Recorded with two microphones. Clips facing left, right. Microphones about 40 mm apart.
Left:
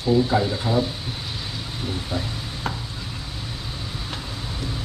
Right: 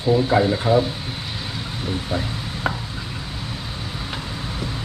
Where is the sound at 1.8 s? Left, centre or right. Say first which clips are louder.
Right 3 dB; centre.